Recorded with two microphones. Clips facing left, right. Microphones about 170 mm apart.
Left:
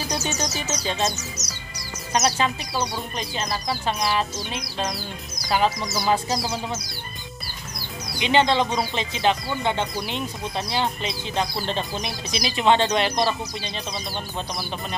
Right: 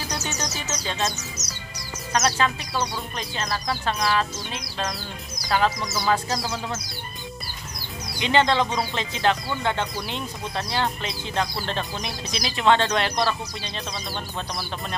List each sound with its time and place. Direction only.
0.1 s speech: 15° left (ahead or behind)
1.4 s music: 35° left (ahead or behind)
2.1 s speech: 15° left (ahead or behind)
8.2 s speech: 20° left (ahead or behind)